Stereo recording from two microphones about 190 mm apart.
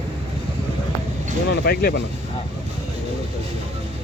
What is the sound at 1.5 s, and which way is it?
Speech, 55° left (ahead or behind).